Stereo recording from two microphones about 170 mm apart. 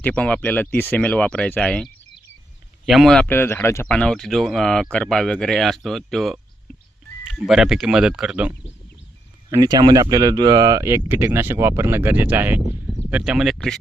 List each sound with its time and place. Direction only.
0.0 s speech: 10° left (ahead or behind)
9.5 s speech: 25° right (ahead or behind); by 13.7 s centre (ahead or behind)